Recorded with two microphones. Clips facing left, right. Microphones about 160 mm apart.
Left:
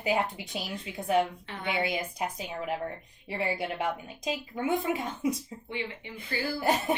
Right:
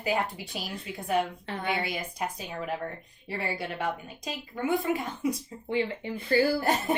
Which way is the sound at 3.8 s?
20° left (ahead or behind).